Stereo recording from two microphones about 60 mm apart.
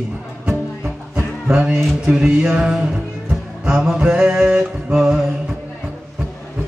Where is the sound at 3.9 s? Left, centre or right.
Centre.